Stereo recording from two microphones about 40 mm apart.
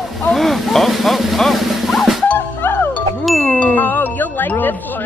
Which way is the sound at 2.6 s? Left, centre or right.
Left.